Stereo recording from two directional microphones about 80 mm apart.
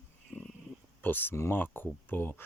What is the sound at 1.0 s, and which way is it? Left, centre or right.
Speech, left.